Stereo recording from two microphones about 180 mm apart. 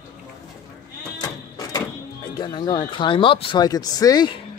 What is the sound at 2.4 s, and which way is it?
Speech, 25° left (ahead or behind).